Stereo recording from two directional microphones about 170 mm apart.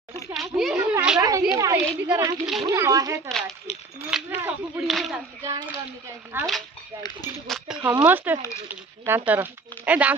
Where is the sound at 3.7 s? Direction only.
40° left (ahead or behind).